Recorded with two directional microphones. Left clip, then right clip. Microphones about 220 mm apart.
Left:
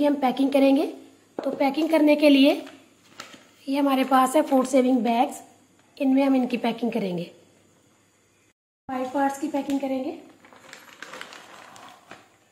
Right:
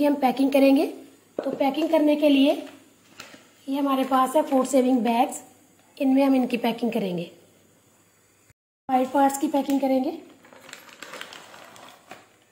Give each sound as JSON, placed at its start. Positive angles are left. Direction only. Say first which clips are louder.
{"t": 0.0, "sound": "a woman's voice", "louder": "right 1 dB", "side_deg": 0}
{"t": 1.8, "sound": "a woman's voice", "louder": "left 2 dB", "side_deg": 15}
{"t": 3.6, "sound": "a woman's voice", "louder": "left 2 dB", "side_deg": 15}
{"t": 4.7, "sound": "a woman's voice", "louder": "right 1 dB", "side_deg": 0}
{"t": 8.8, "sound": "speech", "louder": "right 5 dB", "side_deg": -45}
{"t": 10.4, "sound": "a sound", "louder": "right 1 dB", "side_deg": 0}